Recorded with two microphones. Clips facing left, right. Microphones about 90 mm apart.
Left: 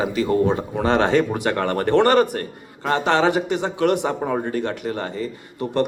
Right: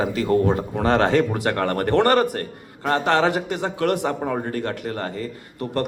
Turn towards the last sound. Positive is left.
turn(degrees=20)  # may be behind; listen again after turning